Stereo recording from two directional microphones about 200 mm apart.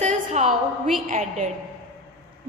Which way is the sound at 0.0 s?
35° right (ahead or behind).